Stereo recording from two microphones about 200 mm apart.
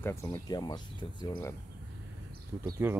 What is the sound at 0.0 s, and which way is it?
Speech, 10° left (ahead or behind).